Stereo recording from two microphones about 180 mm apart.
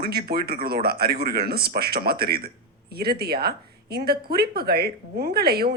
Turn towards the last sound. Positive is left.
turn(degrees=-60)  # may be behind; listen again after turning